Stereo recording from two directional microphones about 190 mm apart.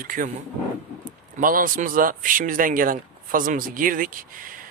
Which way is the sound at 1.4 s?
45° right (ahead or behind).